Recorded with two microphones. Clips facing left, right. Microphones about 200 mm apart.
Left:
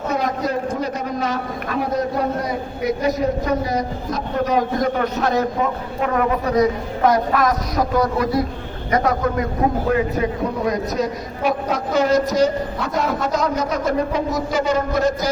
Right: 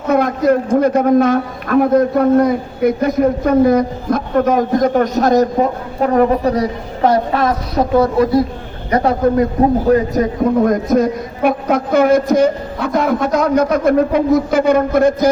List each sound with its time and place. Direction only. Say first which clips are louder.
0.1 s a man's voice: right 10 dB; 55° right (ahead or behind); by 9.5 s 30° right (ahead or behind)
9.9 s a woman's voice: right 6 dB; 45° right (ahead or behind)